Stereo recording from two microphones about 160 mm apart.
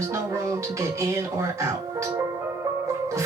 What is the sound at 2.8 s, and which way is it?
Music, 20° right (ahead or behind).